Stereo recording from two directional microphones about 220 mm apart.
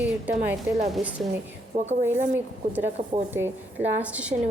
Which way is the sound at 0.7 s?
10° right (ahead or behind).